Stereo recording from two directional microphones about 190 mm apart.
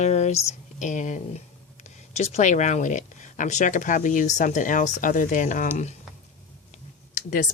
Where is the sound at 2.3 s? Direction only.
40° left (ahead or behind).